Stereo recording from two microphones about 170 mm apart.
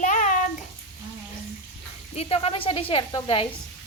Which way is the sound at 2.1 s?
35° left (ahead or behind).